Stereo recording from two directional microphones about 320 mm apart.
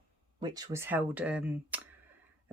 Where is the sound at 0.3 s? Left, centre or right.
Centre.